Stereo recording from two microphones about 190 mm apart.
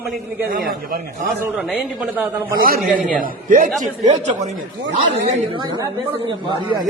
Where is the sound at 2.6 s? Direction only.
50° right (ahead or behind).